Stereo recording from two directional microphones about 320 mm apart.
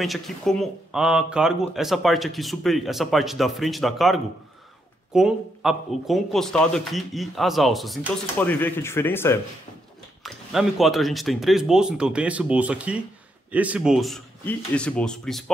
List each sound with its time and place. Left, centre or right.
0.0 s a man's voice: centre